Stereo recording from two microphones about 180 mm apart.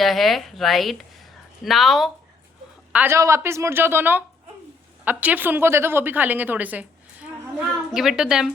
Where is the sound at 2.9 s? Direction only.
10° right (ahead or behind).